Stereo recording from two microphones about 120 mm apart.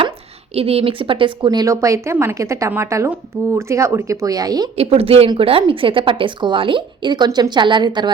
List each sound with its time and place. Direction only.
0.5 s a woman's voice: 55° right (ahead or behind); by 4.7 s 30° right (ahead or behind)
4.8 s a woman's voice: 55° right (ahead or behind); by 8.1 s 40° right (ahead or behind)